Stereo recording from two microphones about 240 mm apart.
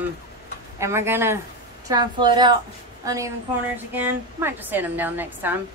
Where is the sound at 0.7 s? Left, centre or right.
Centre.